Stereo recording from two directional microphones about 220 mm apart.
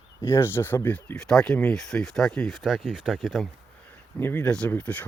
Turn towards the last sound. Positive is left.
turn(degrees=5)  # may be behind; listen again after turning